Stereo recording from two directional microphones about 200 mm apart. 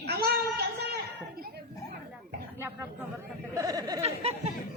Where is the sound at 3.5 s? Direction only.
20° right (ahead or behind).